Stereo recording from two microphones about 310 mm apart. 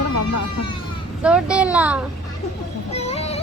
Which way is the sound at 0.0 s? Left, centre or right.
Left.